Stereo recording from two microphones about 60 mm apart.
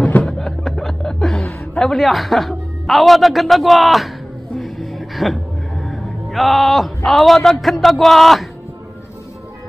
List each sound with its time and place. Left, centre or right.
0.0 s chuckle: centre
1.9 s a man's voice: centre
4.6 s music: centre
7.1 s a man's voice: centre